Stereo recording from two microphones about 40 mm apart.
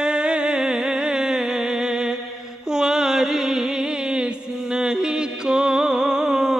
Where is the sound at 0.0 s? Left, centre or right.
Right.